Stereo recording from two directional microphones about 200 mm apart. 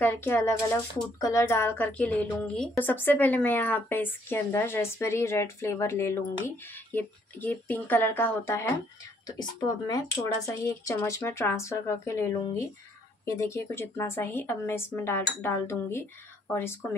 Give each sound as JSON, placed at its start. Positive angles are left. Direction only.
{"t": 0.0, "sound": "a woman's voice", "side_deg": 10}